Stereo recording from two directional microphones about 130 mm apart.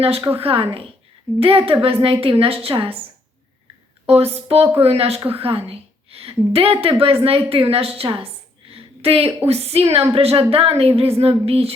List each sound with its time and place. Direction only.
0.3 s a woman's voice: 50° right (ahead or behind)
4.0 s a woman's voice: 50° right (ahead or behind)
8.7 s a sound: 50° right (ahead or behind)
9.5 s a woman's voice: 50° right (ahead or behind)